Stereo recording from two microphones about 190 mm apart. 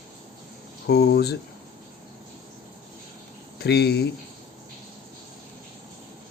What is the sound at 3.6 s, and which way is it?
Speech, 60° left (ahead or behind).